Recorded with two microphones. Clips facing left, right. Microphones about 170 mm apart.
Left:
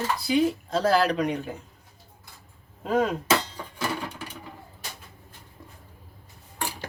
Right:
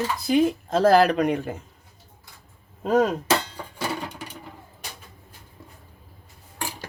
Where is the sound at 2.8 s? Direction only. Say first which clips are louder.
Right 4 dB; 40° right (ahead or behind).